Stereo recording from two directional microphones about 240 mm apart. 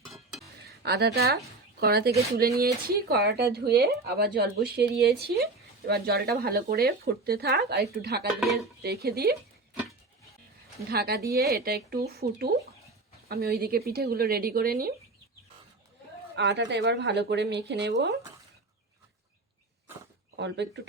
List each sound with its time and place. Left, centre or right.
0.8 s speech: right
10.8 s speech: right
16.3 s speech: right
20.3 s speech: right